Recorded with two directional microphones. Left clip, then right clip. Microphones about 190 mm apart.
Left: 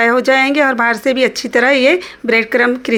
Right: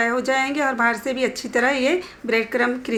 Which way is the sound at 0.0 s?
40° left (ahead or behind).